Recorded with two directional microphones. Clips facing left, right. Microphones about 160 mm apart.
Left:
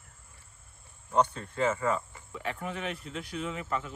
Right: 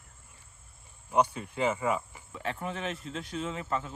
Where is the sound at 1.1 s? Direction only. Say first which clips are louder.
Even; 10° right (ahead or behind).